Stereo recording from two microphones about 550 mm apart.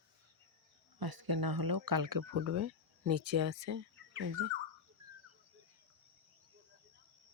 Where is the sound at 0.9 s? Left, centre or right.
Right.